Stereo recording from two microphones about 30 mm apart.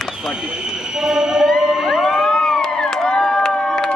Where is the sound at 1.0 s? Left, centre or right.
Centre.